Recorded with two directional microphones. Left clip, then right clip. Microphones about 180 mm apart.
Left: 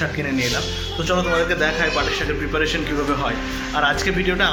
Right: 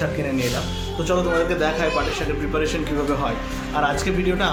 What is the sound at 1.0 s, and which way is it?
A man's voice, centre (ahead or behind).